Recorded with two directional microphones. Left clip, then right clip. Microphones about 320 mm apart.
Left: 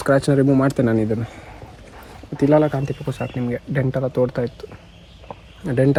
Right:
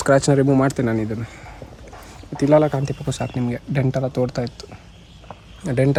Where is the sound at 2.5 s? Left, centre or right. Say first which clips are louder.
Right 2 dB; centre.